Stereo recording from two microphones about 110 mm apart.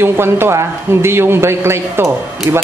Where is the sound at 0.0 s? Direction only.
20° right (ahead or behind).